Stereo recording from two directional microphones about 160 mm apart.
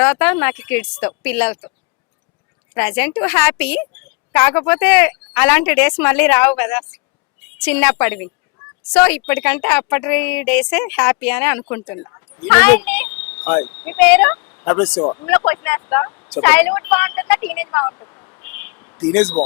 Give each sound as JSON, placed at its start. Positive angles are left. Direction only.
{"t": 0.0, "sound": "a woman's voice", "side_deg": 10}
{"t": 2.7, "sound": "a woman's voice", "side_deg": 10}
{"t": 12.4, "sound": "speech", "side_deg": 10}
{"t": 15.0, "sound": "a woman's voice", "side_deg": 20}
{"t": 16.3, "sound": "a woman's voice", "side_deg": 10}